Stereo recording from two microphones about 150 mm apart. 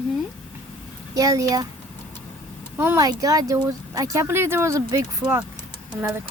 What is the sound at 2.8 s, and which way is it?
Speech, 20° right (ahead or behind).